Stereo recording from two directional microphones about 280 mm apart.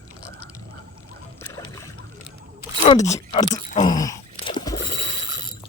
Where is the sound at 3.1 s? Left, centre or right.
Left.